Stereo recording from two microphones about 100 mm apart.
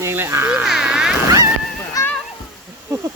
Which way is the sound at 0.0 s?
25° right (ahead or behind).